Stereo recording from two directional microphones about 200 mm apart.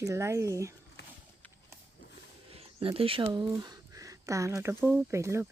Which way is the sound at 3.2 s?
20° right (ahead or behind).